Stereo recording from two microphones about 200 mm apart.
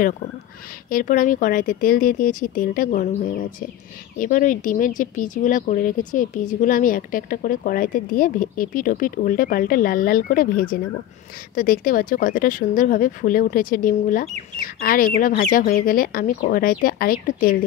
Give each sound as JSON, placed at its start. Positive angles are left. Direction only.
{"t": 0.8, "sound": "speech", "side_deg": 45}